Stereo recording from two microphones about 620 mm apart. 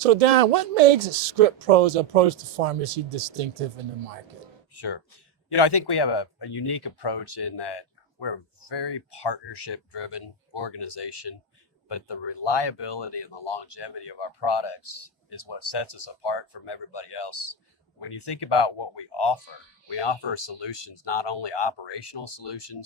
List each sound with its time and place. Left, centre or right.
0.0 s speech: right
5.5 s speech: left